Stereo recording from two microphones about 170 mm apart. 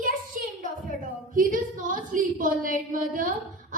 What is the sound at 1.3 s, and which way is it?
A woman's voice, 55° right (ahead or behind).